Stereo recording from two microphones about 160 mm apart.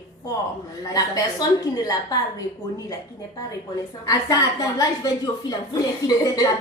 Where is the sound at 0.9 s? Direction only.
25° left (ahead or behind).